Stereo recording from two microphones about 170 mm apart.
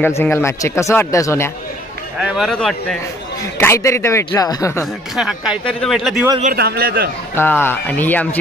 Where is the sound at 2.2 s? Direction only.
Centre (ahead or behind).